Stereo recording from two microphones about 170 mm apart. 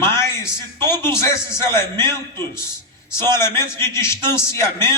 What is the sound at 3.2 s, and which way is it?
Speech, 25° right (ahead or behind).